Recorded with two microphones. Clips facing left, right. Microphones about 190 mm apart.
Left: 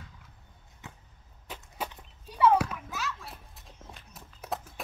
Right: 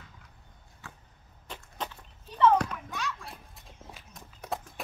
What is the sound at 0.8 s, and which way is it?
Arrow, 20° left (ahead or behind).